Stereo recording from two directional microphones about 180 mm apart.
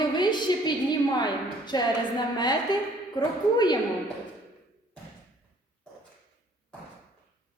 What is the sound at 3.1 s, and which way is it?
Speech, 25° left (ahead or behind).